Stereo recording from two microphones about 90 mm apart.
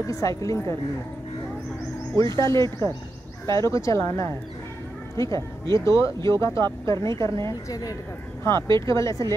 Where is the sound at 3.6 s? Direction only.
35° left (ahead or behind).